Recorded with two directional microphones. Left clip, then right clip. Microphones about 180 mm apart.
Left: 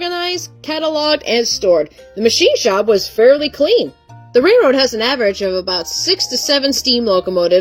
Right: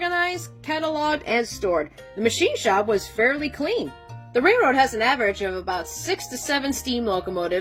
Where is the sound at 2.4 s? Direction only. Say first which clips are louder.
Left 8 dB; 30° left (ahead or behind).